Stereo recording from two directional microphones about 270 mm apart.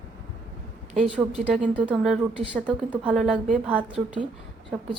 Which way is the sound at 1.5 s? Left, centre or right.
Centre.